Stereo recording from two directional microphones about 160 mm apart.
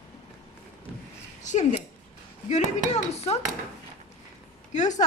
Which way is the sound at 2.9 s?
40° left (ahead or behind).